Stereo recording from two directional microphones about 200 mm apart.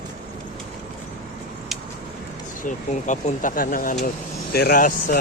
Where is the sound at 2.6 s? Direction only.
40° left (ahead or behind).